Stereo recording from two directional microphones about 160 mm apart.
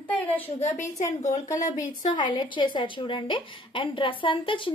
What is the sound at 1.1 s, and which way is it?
Speech, 45° left (ahead or behind).